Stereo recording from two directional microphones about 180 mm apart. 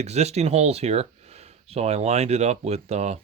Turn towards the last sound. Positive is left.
turn(degrees=-35)  # may be behind; listen again after turning